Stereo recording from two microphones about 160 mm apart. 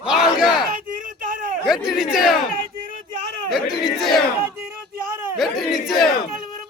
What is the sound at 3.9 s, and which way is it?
Battle cry, centre (ahead or behind).